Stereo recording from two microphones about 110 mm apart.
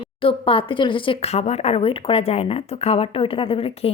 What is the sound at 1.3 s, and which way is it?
A woman's voice, 85° left.